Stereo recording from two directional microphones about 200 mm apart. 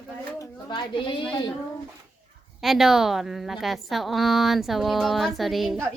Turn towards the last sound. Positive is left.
turn(degrees=0)  # may be behind; listen again after turning